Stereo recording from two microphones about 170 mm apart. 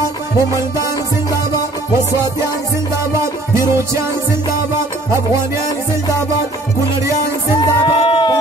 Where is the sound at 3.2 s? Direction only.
15° right (ahead or behind).